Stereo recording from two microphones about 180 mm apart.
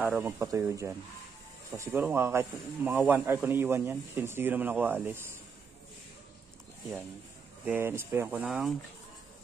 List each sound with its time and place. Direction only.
0.0 s speech: 10° right (ahead or behind)
2.0 s speech: 15° right (ahead or behind)
7.6 s speech: 10° right (ahead or behind)